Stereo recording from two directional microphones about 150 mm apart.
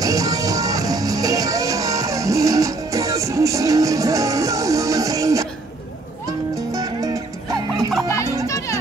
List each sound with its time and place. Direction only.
0.0 s music: 25° right (ahead or behind)
6.5 s music: 20° right (ahead or behind)
8.5 s music: 20° left (ahead or behind)